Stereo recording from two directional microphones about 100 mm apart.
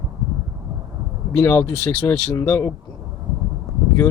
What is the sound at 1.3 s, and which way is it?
Speech, 25° left (ahead or behind).